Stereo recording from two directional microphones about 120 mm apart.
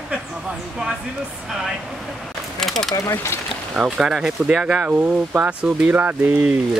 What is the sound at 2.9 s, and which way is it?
Speech, 25° left (ahead or behind).